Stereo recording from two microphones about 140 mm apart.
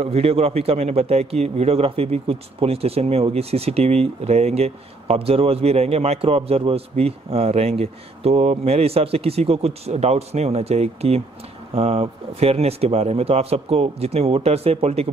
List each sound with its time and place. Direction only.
0.0 s a man's voice: 45° right (ahead or behind)